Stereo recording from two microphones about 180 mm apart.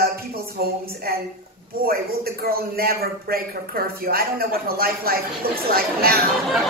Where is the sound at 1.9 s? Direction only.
55° right (ahead or behind).